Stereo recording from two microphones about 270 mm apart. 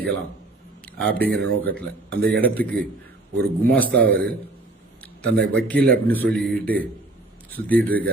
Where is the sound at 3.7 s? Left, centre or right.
Centre.